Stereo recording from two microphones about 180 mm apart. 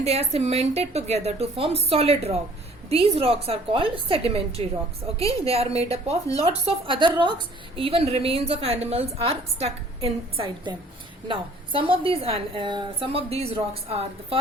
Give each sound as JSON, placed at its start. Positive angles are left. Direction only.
{"t": 0.0, "sound": "a woman's voice", "side_deg": -35}